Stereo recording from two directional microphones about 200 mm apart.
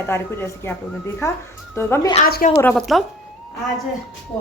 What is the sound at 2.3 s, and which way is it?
Speech, 50° left (ahead or behind).